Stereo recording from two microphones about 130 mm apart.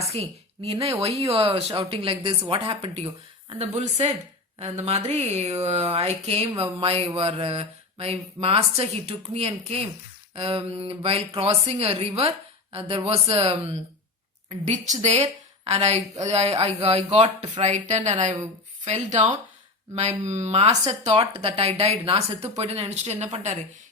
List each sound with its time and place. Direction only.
0.1 s a woman's voice: 50° right (ahead or behind)
15.0 s speech: 55° right (ahead or behind)
17.2 s speech: 35° right (ahead or behind)
17.6 s speech: 60° right (ahead or behind)
21.0 s speech: 50° right (ahead or behind)